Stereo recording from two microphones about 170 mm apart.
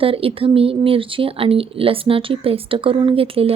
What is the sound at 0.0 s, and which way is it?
Speech, 35° right (ahead or behind).